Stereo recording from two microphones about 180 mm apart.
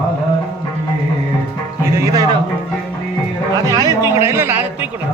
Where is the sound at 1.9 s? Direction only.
20° right (ahead or behind).